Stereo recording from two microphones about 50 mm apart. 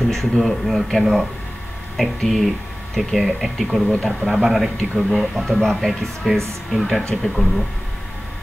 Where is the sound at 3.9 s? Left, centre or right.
Centre.